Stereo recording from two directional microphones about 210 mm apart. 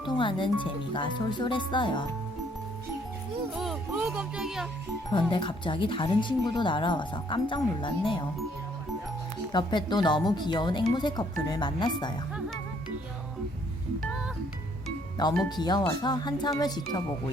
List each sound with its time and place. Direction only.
0.0 s speech: 25° left (ahead or behind)
3.5 s speech: centre (ahead or behind)
5.3 s speech: 25° left (ahead or behind)
9.5 s speech: 20° left (ahead or behind)
15.4 s speech: 20° left (ahead or behind)